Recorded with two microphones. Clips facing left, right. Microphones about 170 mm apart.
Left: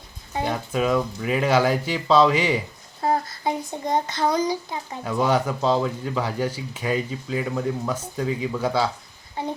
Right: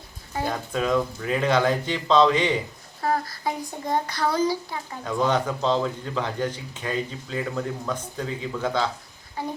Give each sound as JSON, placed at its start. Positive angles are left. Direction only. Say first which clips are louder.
{"t": 0.7, "sound": "a child's voice", "louder": "left 1 dB", "side_deg": 5}
{"t": 3.0, "sound": "a child's voice", "louder": "left 2 dB", "side_deg": 25}
{"t": 9.4, "sound": "child singing", "louder": "left 2 dB", "side_deg": 25}